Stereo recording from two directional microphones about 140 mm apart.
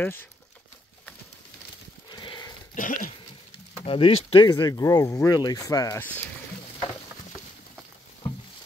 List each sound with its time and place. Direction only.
0.0 s speech: 15° left (ahead or behind)
2.0 s horse: 30° left (ahead or behind)
2.7 s dog: 75° left (ahead or behind)
3.8 s speech: 45° left (ahead or behind)
4.5 s speech: 25° left (ahead or behind)